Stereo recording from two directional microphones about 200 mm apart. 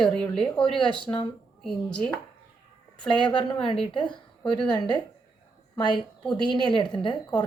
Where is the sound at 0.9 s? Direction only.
25° left (ahead or behind).